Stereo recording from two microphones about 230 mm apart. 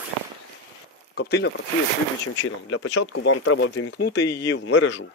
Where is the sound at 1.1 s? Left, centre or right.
Left.